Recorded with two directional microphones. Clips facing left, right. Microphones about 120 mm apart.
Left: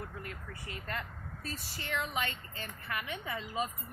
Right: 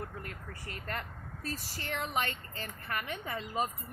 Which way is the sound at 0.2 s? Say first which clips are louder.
Even; 45° right (ahead or behind).